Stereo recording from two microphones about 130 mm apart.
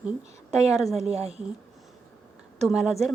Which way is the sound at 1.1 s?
50° right (ahead or behind).